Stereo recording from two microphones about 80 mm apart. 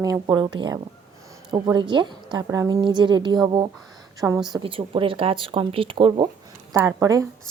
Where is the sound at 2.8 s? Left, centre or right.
Right.